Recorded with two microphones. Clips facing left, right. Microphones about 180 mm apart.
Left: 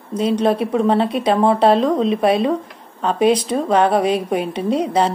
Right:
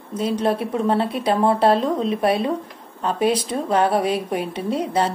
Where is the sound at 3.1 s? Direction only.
20° left (ahead or behind).